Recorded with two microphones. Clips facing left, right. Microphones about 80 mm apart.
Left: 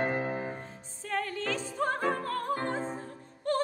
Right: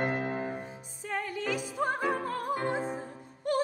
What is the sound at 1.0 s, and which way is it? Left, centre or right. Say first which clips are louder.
Opera: even; centre.